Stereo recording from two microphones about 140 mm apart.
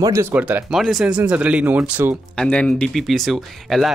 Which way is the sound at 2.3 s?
5° left (ahead or behind).